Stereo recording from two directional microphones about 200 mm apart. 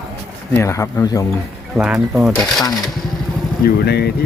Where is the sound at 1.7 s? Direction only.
5° right (ahead or behind).